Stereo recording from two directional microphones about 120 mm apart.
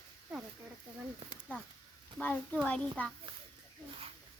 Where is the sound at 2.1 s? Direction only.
15° left (ahead or behind).